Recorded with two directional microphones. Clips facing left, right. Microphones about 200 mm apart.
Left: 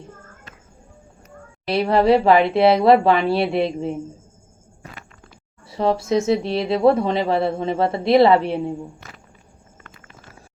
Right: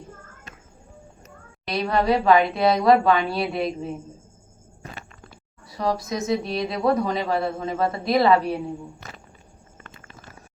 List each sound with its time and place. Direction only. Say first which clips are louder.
1.6 s speech: left 5 dB; 30° left (ahead or behind)
5.6 s speech: left 5 dB; 25° left (ahead or behind)
9.8 s clip-clop: right 1 dB; 30° right (ahead or behind)